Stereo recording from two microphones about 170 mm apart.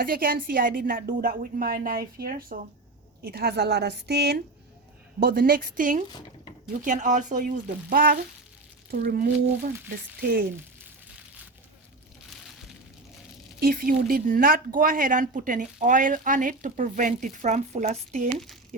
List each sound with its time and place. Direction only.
0.0 s a woman's voice: 60° right (ahead or behind); by 4.4 s 75° right (ahead or behind)
5.2 s a woman's voice: 60° right (ahead or behind)
6.1 s speech: 25° left (ahead or behind)
6.8 s a woman's voice: 50° right (ahead or behind)
13.6 s speech: 55° right (ahead or behind)